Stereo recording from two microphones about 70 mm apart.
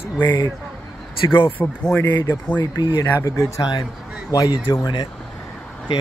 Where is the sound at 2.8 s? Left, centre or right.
Left.